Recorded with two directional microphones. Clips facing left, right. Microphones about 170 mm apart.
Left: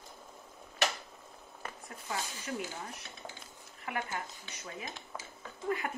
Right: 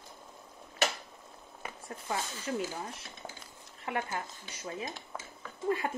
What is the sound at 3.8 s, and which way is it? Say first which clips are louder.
Speech: right 3 dB; 30° right (ahead or behind).